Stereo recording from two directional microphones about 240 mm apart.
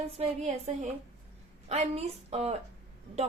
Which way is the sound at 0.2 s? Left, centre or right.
Right.